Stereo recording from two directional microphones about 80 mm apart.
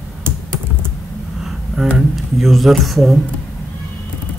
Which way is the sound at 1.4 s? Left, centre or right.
Centre.